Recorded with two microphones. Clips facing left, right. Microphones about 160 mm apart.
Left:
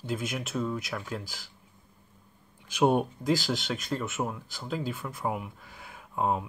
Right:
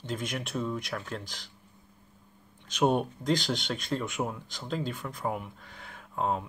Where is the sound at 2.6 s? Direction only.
10° left (ahead or behind).